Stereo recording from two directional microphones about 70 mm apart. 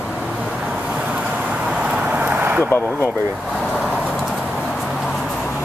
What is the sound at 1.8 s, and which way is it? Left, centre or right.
Vehicle, right.